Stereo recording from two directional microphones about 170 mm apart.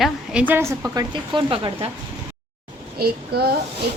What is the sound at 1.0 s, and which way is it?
Speech, 25° right (ahead or behind).